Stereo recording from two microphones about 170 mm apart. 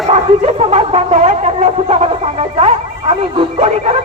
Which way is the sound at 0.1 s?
40° right (ahead or behind).